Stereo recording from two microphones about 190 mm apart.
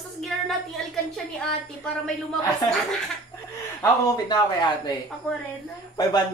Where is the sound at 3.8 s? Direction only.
20° left (ahead or behind).